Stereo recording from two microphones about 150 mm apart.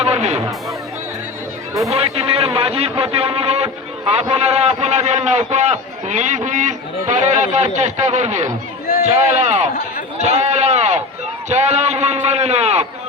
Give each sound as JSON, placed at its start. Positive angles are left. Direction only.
{"t": 0.0, "sound": "music", "side_deg": -45}
{"t": 1.9, "sound": "a man's voice", "side_deg": -40}